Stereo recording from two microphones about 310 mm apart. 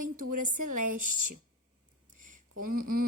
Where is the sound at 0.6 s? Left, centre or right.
Right.